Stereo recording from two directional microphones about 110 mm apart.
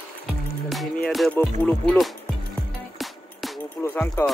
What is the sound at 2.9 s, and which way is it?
Music, centre (ahead or behind).